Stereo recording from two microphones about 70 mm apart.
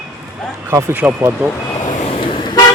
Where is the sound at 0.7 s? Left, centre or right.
Right.